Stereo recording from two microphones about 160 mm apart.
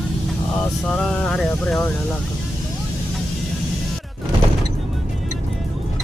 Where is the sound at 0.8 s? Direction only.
5° left (ahead or behind).